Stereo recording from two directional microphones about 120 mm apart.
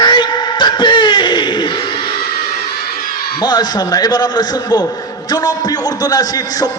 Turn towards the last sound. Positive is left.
turn(degrees=30)  # may be behind; listen again after turning